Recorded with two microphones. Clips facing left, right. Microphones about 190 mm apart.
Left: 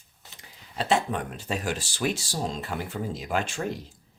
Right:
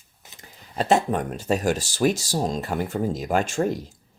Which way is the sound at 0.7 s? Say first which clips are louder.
Right 5 dB; 45° right (ahead or behind).